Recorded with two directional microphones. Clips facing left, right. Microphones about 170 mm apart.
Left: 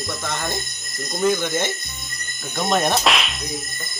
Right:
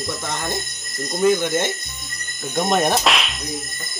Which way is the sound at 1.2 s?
15° right (ahead or behind).